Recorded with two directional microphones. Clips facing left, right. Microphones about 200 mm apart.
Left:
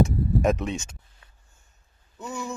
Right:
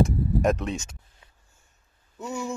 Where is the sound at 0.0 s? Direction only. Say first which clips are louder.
Even; centre (ahead or behind).